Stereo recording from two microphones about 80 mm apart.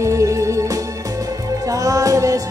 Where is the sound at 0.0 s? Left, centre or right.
Right.